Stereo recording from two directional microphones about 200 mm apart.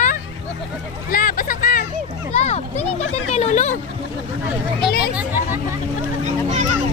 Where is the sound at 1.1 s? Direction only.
45° left (ahead or behind).